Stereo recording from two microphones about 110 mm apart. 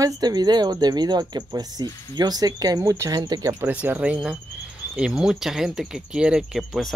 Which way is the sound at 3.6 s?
15° right (ahead or behind).